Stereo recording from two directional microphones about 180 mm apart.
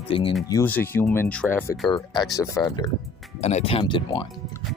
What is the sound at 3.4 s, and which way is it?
Speech, 35° left (ahead or behind).